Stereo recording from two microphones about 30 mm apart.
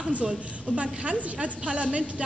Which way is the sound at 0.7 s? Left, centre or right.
Right.